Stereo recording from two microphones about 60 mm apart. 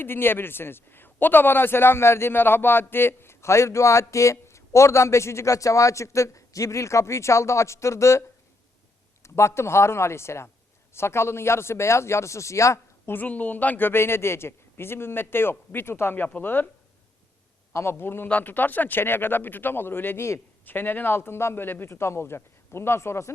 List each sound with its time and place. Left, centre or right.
0.0 s a man's voice: left
9.2 s a man's voice: left
13.2 s a man's voice: left
17.7 s a man's voice: left